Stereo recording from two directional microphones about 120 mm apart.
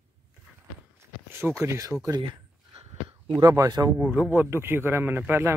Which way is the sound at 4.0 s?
15° right (ahead or behind).